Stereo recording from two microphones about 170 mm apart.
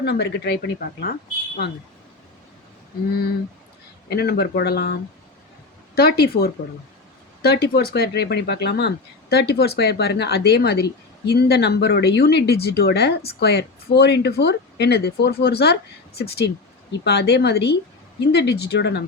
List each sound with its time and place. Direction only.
0.0 s speech: 75° left (ahead or behind)
4.1 s speech: 70° left (ahead or behind)